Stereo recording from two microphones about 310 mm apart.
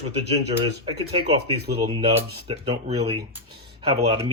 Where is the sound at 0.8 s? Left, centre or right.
Centre.